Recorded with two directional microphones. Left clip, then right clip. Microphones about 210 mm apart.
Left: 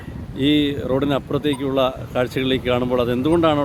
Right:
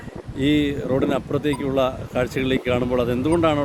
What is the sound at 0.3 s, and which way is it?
Speech, 25° left (ahead or behind).